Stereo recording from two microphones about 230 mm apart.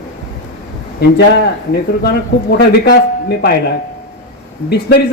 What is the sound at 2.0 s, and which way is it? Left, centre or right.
Speech, left.